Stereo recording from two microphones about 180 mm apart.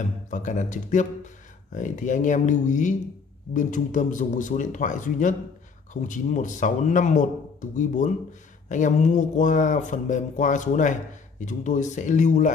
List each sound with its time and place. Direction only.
0.0 s speech: 45° left (ahead or behind)